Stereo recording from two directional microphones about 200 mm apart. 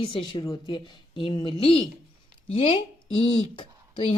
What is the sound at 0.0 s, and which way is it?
A woman's voice, 25° left (ahead or behind).